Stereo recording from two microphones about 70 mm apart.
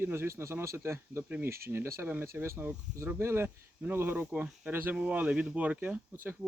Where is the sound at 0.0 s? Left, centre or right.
Right.